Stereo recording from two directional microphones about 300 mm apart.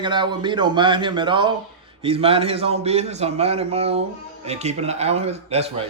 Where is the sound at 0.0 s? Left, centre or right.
Centre.